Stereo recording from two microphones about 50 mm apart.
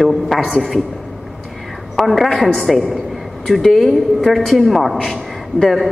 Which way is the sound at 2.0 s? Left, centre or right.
Centre.